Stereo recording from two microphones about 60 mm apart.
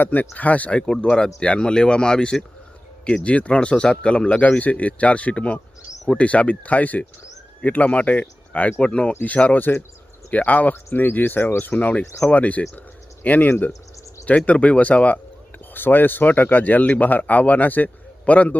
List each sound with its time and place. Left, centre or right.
0.0 s speech: left
11.6 s speech: left